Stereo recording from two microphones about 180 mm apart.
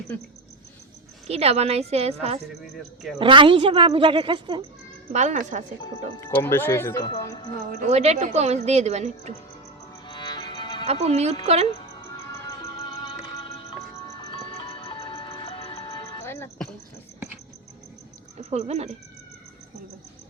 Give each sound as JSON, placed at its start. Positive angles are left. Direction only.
{"t": 1.3, "sound": "a woman's voice", "side_deg": -35}
{"t": 3.2, "sound": "a woman's voice", "side_deg": -30}
{"t": 5.1, "sound": "speech", "side_deg": -40}
{"t": 6.1, "sound": "speech", "side_deg": 15}
{"t": 7.7, "sound": "a woman's voice", "side_deg": -40}
{"t": 10.1, "sound": "music", "side_deg": 25}
{"t": 10.8, "sound": "a woman's voice", "side_deg": -35}
{"t": 13.9, "sound": "music", "side_deg": 20}
{"t": 14.3, "sound": "music", "side_deg": 30}
{"t": 18.3, "sound": "speech", "side_deg": -40}